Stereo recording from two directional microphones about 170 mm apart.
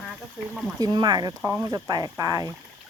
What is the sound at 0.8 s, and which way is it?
Speech, 25° right (ahead or behind).